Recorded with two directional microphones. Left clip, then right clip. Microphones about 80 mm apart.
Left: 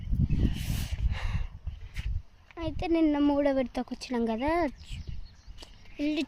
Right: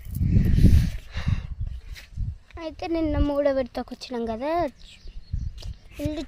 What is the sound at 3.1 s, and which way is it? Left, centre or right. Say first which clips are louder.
Speech: even; left.